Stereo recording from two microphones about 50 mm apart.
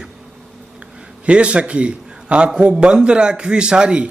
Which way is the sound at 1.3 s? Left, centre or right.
Right.